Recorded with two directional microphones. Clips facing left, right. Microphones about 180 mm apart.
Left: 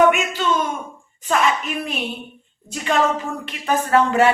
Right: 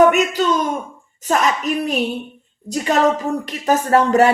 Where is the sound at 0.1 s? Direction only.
40° right (ahead or behind).